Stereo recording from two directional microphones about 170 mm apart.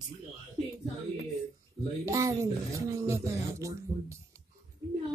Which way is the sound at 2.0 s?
20° right (ahead or behind).